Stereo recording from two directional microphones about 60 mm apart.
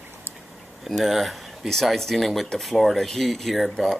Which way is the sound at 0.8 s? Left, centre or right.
Centre.